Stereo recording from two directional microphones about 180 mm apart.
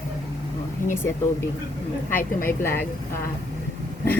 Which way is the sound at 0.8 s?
45° left (ahead or behind).